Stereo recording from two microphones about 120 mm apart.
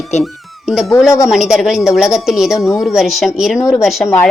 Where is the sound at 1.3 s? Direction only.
5° right (ahead or behind).